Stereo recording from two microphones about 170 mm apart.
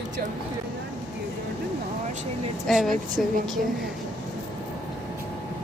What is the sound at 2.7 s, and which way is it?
Speech, centre (ahead or behind).